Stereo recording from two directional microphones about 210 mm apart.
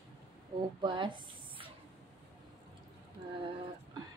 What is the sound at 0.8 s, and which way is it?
Speech, 20° right (ahead or behind).